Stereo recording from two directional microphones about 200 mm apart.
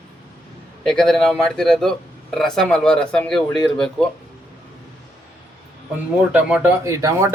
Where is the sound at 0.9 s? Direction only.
Centre (ahead or behind).